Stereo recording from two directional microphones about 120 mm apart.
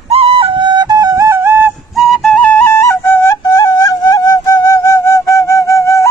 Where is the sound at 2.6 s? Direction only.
25° left (ahead or behind).